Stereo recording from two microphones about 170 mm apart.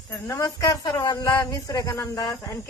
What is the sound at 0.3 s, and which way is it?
A woman's voice, 20° left (ahead or behind).